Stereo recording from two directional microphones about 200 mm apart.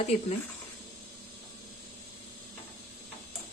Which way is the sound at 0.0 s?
35° left (ahead or behind).